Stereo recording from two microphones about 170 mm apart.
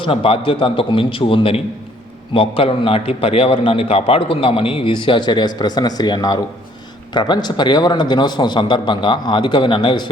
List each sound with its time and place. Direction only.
0.0 s a man's voice: 30° left (ahead or behind)